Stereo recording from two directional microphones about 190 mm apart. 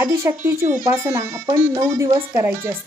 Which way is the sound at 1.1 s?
25° right (ahead or behind).